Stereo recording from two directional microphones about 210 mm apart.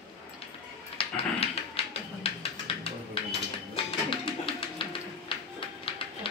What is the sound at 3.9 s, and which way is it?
Music, 25° left (ahead or behind).